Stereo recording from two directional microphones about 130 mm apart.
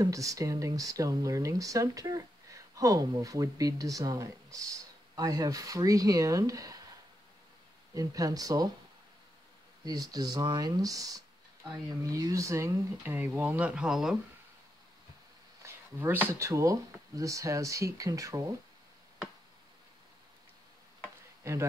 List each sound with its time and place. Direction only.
0.0 s speech: 25° right (ahead or behind)
7.9 s speech: 25° right (ahead or behind)
9.8 s speech: 30° right (ahead or behind); by 14.1 s 5° right (ahead or behind)
15.6 s speech: 20° right (ahead or behind)